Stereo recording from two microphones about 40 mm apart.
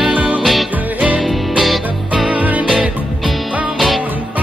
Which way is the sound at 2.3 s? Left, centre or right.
Right.